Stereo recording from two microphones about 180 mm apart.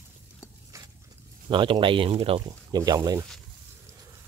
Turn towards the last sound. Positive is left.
turn(degrees=-20)  # may be behind; listen again after turning